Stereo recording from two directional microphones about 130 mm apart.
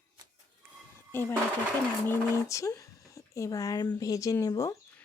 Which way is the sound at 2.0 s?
20° left (ahead or behind).